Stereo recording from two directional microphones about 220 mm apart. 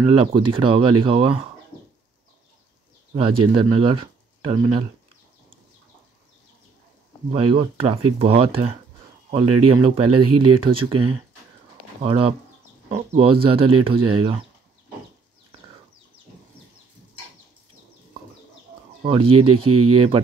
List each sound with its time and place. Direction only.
0.1 s speech: 25° right (ahead or behind)
3.2 s speech: 25° right (ahead or behind)
7.2 s speech: 25° right (ahead or behind)
19.0 s speech: 25° right (ahead or behind)
19.5 s speech: 90° right